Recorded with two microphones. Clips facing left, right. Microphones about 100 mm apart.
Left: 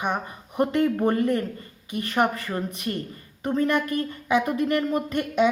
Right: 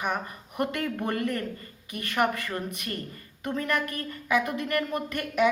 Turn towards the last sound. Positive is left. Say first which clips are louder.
# left 3 dB
turn(degrees=25)  # may be behind; listen again after turning